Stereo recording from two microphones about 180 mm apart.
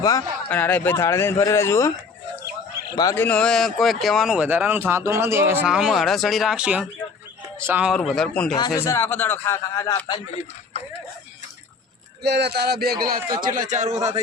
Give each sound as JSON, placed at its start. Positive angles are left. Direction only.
{"t": 0.0, "sound": "speech", "side_deg": 20}
{"t": 0.5, "sound": "a man's voice", "side_deg": 10}
{"t": 2.9, "sound": "a man's voice", "side_deg": 20}
{"t": 3.2, "sound": "speech", "side_deg": 5}
{"t": 7.9, "sound": "speech", "side_deg": 0}
{"t": 8.5, "sound": "a man's voice", "side_deg": 20}
{"t": 12.2, "sound": "a man's voice", "side_deg": -70}